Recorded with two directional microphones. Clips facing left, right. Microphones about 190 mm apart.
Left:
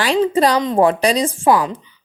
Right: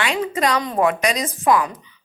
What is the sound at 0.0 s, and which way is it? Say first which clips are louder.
A woman's voice: left 6 dB; 30° left (ahead or behind).